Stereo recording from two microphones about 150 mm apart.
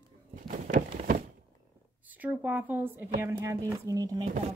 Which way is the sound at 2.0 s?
10° right (ahead or behind).